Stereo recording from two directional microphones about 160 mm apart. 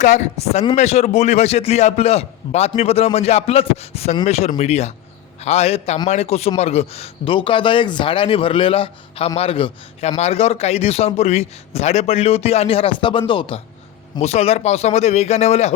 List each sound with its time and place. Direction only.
0.0 s speech: 45° left (ahead or behind); by 13.6 s 30° left (ahead or behind)
14.2 s speech: 40° left (ahead or behind)